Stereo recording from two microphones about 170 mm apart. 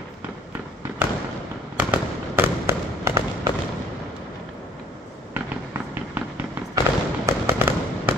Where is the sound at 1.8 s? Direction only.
10° right (ahead or behind).